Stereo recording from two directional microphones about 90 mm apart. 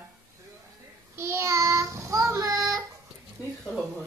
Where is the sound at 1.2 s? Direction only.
30° right (ahead or behind).